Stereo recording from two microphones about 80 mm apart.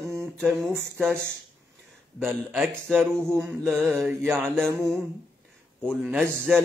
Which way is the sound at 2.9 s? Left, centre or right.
Right.